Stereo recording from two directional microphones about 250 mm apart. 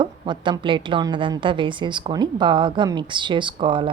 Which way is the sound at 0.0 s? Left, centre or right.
Centre.